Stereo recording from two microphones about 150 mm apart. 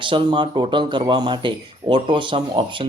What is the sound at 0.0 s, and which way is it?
Speech, 35° right (ahead or behind).